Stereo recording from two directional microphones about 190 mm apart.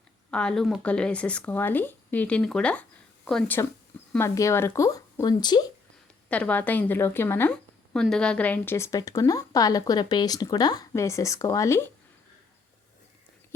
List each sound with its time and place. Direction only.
0.3 s speech: 5° left (ahead or behind); by 5.6 s 20° left (ahead or behind)
6.2 s speech: 5° left (ahead or behind)